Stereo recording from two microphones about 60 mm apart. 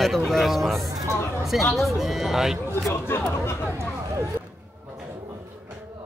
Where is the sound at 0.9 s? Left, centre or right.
Right.